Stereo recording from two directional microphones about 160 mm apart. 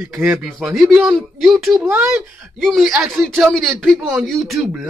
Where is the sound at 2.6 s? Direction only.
Centre (ahead or behind).